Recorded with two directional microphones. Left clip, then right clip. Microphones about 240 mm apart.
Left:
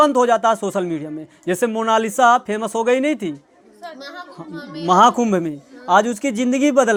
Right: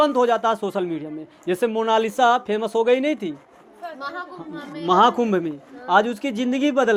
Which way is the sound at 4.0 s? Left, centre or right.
Left.